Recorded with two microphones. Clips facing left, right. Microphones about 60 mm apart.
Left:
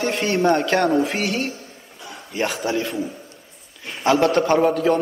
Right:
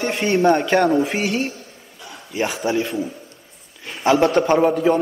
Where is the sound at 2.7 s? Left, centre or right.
Centre.